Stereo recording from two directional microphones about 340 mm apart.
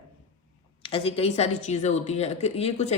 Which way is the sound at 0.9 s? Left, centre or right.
Centre.